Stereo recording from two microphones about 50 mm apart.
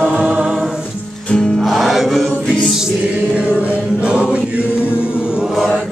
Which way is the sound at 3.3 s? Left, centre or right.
Right.